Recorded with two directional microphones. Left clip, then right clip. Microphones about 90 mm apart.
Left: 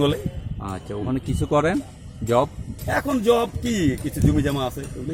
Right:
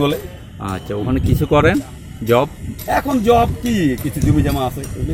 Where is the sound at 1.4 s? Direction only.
15° left (ahead or behind).